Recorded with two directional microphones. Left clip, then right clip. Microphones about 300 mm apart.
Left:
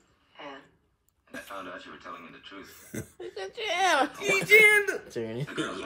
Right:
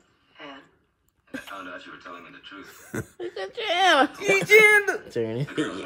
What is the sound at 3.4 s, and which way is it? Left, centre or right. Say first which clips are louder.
Speech: right 5 dB; right.